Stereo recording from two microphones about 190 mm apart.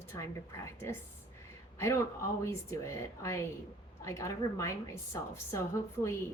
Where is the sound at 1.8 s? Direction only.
15° left (ahead or behind).